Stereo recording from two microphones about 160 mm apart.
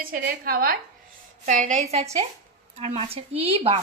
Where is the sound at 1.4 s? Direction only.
50° right (ahead or behind).